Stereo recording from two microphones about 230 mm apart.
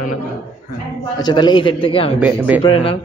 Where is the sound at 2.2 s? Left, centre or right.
Centre.